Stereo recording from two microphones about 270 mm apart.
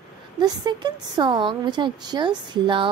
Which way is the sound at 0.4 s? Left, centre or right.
Centre.